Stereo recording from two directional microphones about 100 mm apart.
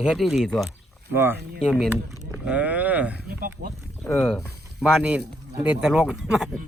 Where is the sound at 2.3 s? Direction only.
10° right (ahead or behind).